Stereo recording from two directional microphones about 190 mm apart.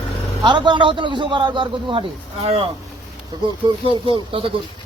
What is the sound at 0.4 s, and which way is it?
A man's voice, 25° right (ahead or behind).